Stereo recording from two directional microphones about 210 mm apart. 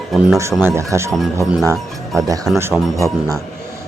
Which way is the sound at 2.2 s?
15° right (ahead or behind).